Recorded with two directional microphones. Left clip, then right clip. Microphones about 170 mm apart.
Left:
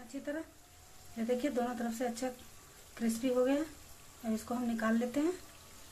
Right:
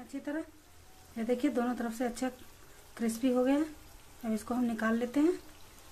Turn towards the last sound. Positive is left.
turn(degrees=-15)  # may be behind; listen again after turning